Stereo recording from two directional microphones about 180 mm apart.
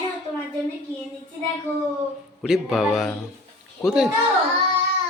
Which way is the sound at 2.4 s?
Centre (ahead or behind).